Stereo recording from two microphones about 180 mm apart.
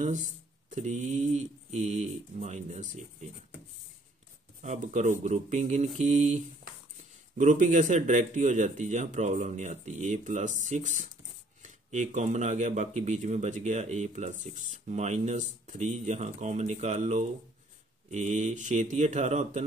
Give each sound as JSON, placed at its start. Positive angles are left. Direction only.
{"t": 0.0, "sound": "speech", "side_deg": -45}
{"t": 4.6, "sound": "speech", "side_deg": -40}